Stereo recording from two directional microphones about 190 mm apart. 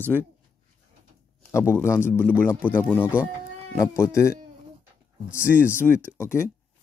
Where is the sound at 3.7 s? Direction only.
15° left (ahead or behind).